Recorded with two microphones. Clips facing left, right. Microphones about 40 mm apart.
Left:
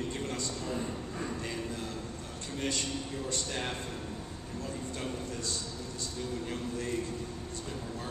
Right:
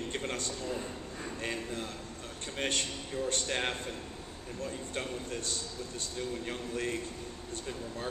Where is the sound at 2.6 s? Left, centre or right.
Right.